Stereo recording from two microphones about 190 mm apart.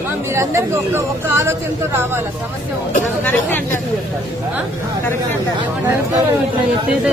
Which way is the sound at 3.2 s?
10° left (ahead or behind).